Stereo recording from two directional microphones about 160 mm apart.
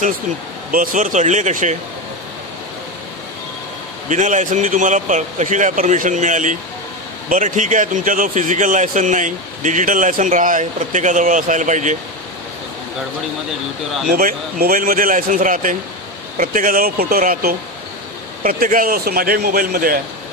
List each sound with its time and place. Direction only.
0.7 s speech: 55° right (ahead or behind)
4.1 s speech: 50° right (ahead or behind)
14.1 s speech: 65° right (ahead or behind)